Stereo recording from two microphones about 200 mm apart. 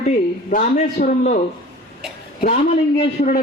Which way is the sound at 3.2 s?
40° left (ahead or behind).